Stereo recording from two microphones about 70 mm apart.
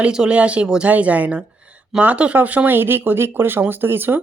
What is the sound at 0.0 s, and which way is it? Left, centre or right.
Speech, centre.